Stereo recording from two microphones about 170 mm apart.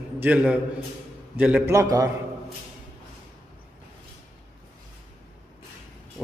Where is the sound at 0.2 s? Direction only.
5° right (ahead or behind).